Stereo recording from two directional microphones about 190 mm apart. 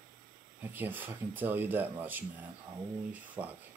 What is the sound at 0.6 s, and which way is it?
Speech, 10° right (ahead or behind).